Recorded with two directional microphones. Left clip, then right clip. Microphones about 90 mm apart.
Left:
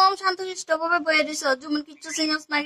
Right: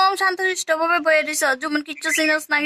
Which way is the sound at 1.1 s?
20° right (ahead or behind).